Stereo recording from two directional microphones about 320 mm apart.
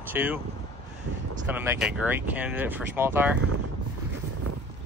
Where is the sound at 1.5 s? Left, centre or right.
Centre.